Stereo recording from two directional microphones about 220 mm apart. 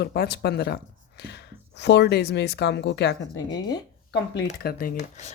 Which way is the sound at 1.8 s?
50° left (ahead or behind).